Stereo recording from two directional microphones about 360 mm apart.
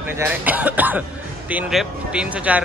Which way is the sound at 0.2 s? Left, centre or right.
Centre.